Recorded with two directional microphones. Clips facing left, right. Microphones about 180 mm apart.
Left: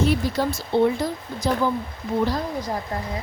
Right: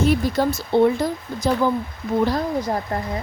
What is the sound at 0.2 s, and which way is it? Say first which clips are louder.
Speech: right 3 dB; 50° right (ahead or behind).